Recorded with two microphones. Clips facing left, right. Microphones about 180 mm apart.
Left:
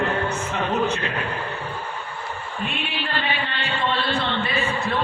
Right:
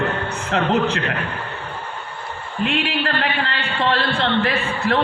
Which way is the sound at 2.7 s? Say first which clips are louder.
Right 8 dB; 80° right.